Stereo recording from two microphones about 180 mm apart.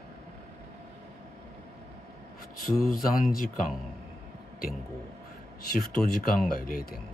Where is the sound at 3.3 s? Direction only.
55° left (ahead or behind).